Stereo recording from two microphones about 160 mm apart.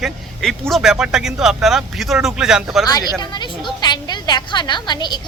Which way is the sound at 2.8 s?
25° left (ahead or behind).